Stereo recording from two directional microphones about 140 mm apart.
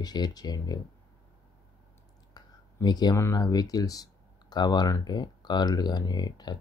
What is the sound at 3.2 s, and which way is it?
Speech, 25° left (ahead or behind).